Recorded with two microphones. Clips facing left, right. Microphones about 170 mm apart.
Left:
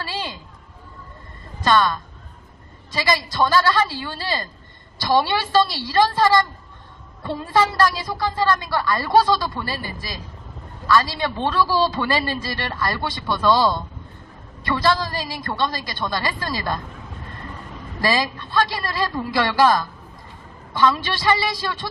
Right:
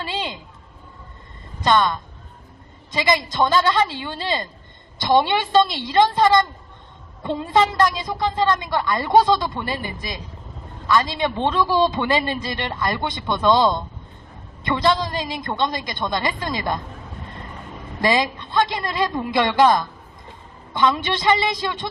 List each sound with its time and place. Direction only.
0.0 s a man's voice: 20° right (ahead or behind)
1.6 s a man's voice: 20° right (ahead or behind)
18.0 s a woman's voice: 20° right (ahead or behind)